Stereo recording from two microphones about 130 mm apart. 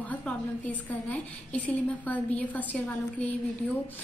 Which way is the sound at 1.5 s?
10° left (ahead or behind).